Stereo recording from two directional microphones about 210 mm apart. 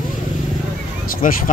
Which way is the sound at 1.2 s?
40° left (ahead or behind).